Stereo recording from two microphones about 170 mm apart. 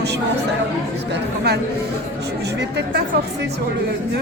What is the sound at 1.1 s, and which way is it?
Speech, 70° right (ahead or behind).